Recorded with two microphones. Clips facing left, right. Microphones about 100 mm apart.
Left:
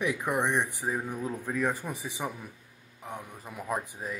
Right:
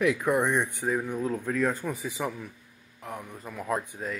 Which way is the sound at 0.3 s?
15° left (ahead or behind).